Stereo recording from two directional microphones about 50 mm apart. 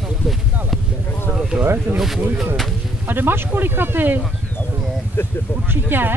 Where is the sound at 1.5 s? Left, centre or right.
Right.